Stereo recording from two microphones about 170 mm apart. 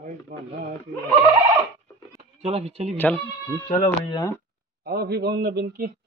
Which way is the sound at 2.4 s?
35° right (ahead or behind).